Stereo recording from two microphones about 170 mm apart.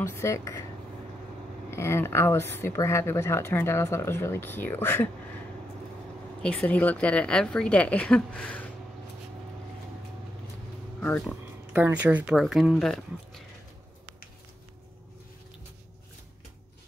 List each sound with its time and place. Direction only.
0.0 s speech: 15° left (ahead or behind)
1.7 s speech: 15° left (ahead or behind)
6.4 s speech: 5° left (ahead or behind)
11.0 s speech: 5° left (ahead or behind)
11.7 s speech: 10° right (ahead or behind)